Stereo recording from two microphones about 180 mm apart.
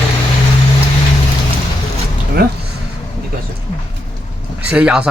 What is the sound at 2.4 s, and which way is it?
Speech, 60° right (ahead or behind).